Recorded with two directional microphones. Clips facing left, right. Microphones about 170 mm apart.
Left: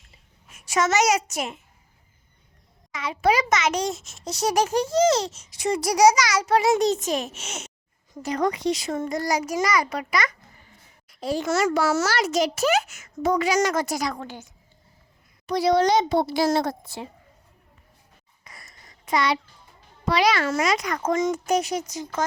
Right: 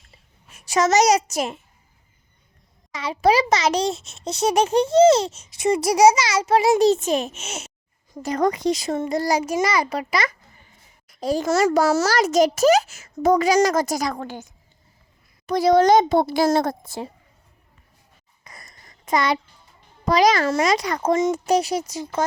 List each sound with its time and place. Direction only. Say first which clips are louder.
0.5 s a child's voice: right 4 dB; 35° right (ahead or behind)
2.9 s a child's voice: right 3 dB; 35° right (ahead or behind)
8.2 s speech: right 3 dB; 45° right (ahead or behind)
9.0 s a child's voice: right 4 dB; 30° right (ahead or behind)
11.1 s a child's voice: right 4 dB; 40° right (ahead or behind)
15.4 s speech: right 4 dB; 50° right (ahead or behind)
18.5 s a sound: right 3 dB; 45° right (ahead or behind)
19.0 s a child's voice: right 2 dB; 45° right (ahead or behind)